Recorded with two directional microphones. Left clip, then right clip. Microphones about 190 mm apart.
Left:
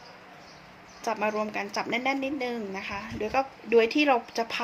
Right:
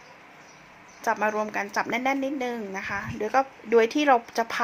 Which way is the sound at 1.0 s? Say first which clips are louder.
Right 3 dB; 15° right (ahead or behind).